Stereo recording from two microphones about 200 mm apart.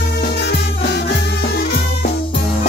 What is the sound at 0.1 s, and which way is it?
Music, 55° left (ahead or behind).